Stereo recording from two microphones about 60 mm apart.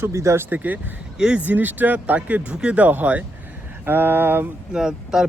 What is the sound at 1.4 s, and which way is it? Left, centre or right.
A man's voice, right.